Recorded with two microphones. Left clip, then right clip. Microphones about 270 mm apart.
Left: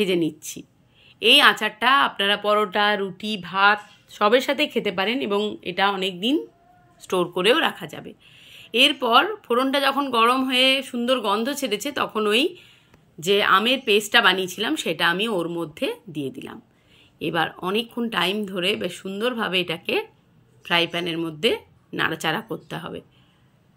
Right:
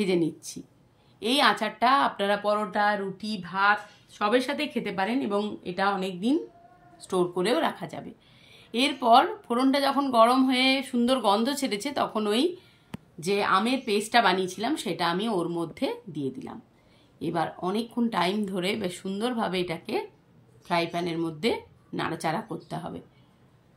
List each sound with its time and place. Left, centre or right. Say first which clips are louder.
1.2 s speech: left 8 dB; centre
7.3 s speech: left 6 dB; centre
16.1 s a woman's voice: left 3 dB; centre
17.2 s speech: left 5 dB; centre